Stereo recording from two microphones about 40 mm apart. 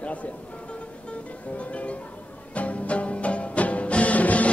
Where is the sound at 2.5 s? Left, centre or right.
Left.